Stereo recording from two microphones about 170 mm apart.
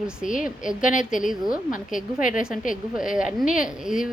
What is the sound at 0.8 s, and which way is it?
A woman's voice, 50° left (ahead or behind).